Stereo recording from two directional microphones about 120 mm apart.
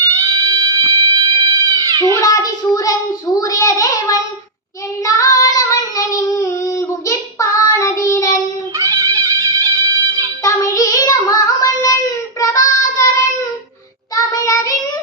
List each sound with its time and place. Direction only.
0.0 s music: 25° right (ahead or behind)
1.6 s cat: 30° right (ahead or behind)
2.1 s child singing: 30° left (ahead or behind)
3.3 s a child's voice: 30° left (ahead or behind)
5.0 s child singing: 30° left (ahead or behind)
8.8 s music: 25° right (ahead or behind)
10.4 s child singing: 25° left (ahead or behind)
14.3 s child singing: 30° left (ahead or behind)